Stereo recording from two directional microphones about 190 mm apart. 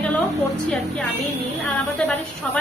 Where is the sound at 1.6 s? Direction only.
5° left (ahead or behind).